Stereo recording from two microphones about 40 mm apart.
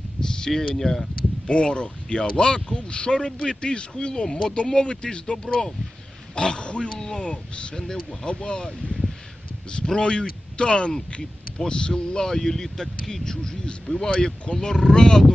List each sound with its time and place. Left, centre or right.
0.2 s speech: centre
1.5 s speech: left
7.9 s speech: centre
8.4 s speech: left